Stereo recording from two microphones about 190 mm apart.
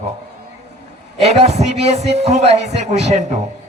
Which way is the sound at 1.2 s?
35° right (ahead or behind).